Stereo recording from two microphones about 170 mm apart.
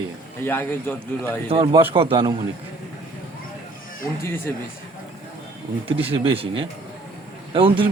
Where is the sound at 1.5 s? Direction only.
25° right (ahead or behind).